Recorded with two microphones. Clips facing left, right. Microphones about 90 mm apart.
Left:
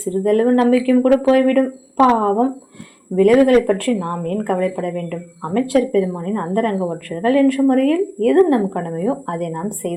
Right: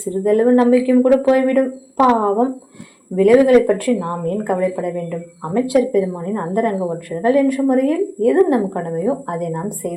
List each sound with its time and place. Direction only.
0.3 s speech: 15° right (ahead or behind)